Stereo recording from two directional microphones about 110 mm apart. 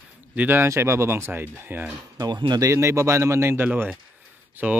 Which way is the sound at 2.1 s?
35° right (ahead or behind).